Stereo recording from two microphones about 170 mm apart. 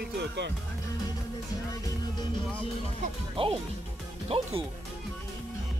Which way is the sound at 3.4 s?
30° right (ahead or behind).